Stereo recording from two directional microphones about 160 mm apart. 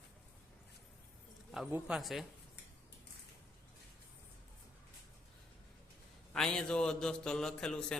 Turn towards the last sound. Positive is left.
turn(degrees=5)  # may be behind; listen again after turning